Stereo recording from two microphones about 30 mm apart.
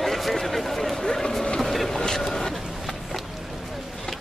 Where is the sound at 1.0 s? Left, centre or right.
Centre.